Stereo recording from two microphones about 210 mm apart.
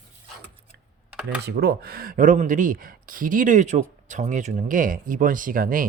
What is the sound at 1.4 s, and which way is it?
Speech, 50° right (ahead or behind).